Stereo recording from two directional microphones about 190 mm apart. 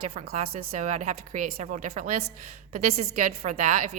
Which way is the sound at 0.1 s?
50° right (ahead or behind).